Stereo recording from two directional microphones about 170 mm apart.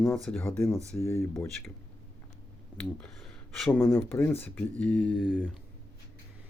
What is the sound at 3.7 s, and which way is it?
Speech, 15° left (ahead or behind).